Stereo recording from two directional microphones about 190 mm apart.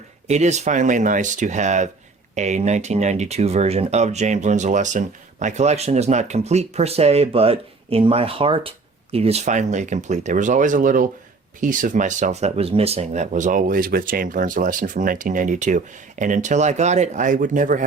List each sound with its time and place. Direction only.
0.3 s speech: 35° right (ahead or behind)